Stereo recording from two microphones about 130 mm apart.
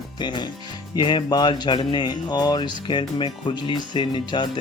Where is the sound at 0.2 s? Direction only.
35° left (ahead or behind).